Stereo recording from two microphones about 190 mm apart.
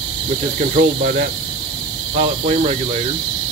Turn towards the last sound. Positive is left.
turn(degrees=-35)  # may be behind; listen again after turning